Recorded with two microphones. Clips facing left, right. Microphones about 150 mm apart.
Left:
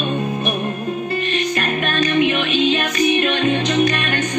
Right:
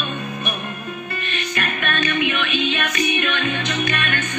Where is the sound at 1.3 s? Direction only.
35° left (ahead or behind).